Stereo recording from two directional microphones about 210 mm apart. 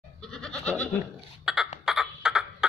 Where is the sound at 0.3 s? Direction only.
5° left (ahead or behind).